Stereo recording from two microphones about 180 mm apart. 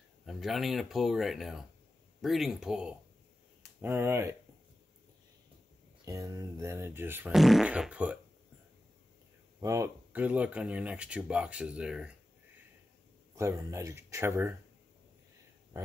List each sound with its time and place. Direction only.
0.2 s speech: centre (ahead or behind)
6.0 s speech: 20° right (ahead or behind)
9.6 s speech: 15° right (ahead or behind)
13.4 s speech: 15° right (ahead or behind)